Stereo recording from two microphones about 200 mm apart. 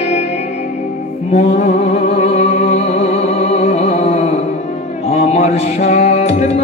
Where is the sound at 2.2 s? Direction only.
35° left (ahead or behind).